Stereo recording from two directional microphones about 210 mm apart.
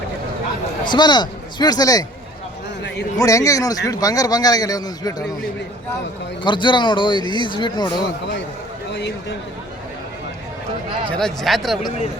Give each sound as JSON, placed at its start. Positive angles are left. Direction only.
{"t": 0.9, "sound": "a man's voice", "side_deg": 20}
{"t": 3.2, "sound": "speech", "side_deg": 15}
{"t": 6.4, "sound": "a man's voice", "side_deg": 20}
{"t": 8.0, "sound": "a man's voice", "side_deg": 55}
{"t": 11.1, "sound": "speech", "side_deg": 5}